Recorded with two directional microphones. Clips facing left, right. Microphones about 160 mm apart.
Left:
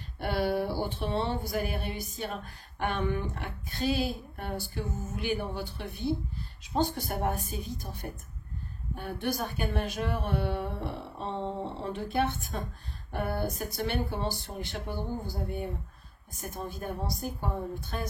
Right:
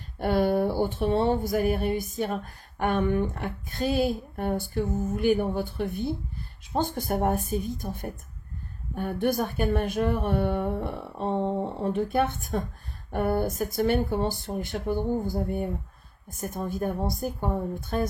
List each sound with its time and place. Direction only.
0.2 s speech: 45° right (ahead or behind)